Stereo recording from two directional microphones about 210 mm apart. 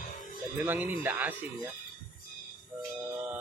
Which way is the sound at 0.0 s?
40° left (ahead or behind).